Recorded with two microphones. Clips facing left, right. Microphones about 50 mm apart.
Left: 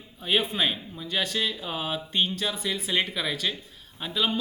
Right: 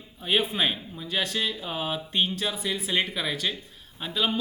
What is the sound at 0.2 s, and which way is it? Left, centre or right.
Speech, centre.